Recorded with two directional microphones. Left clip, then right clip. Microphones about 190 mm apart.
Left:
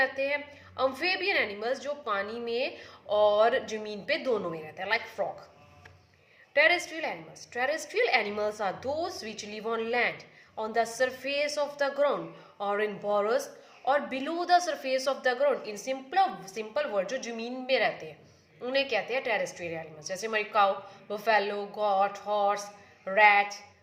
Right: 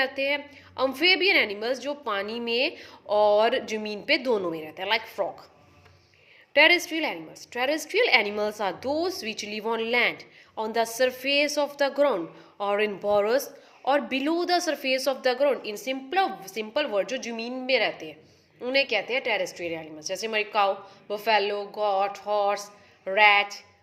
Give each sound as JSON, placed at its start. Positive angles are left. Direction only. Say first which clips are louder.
{"t": 0.0, "sound": "a woman's voice", "louder": "right 2 dB", "side_deg": -45}
{"t": 6.5, "sound": "a woman's voice", "louder": "right 5 dB", "side_deg": -45}